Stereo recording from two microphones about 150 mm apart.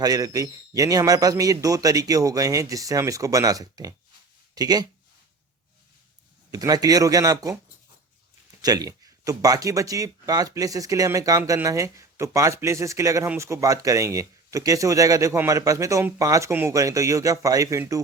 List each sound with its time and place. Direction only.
0.0 s speech: 25° right (ahead or behind)
6.5 s speech: 25° right (ahead or behind)
8.6 s speech: 25° right (ahead or behind)